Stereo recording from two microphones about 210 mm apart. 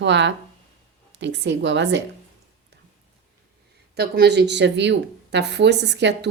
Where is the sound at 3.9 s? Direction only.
50° right (ahead or behind).